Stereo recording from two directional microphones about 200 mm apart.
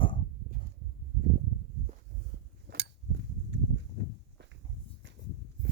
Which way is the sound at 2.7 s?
60° right (ahead or behind).